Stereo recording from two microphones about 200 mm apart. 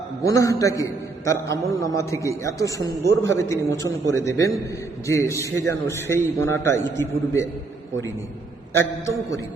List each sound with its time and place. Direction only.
0.2 s a man's voice: 15° left (ahead or behind)
3.0 s a man's voice: 65° right (ahead or behind)
3.3 s a man's voice: 15° left (ahead or behind)
8.7 s a man's voice: 15° left (ahead or behind)